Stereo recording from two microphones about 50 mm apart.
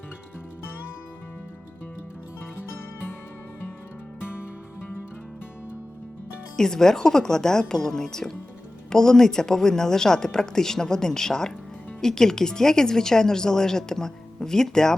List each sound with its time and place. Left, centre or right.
4.2 s music: left
6.6 s speech: centre